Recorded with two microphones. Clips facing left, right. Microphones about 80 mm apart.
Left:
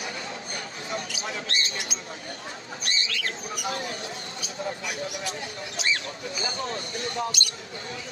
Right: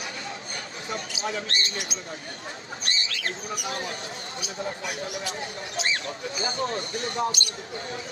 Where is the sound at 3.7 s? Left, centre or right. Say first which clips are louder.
Even; right.